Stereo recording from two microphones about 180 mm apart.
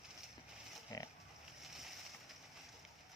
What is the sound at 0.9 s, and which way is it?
Pig, 20° left (ahead or behind).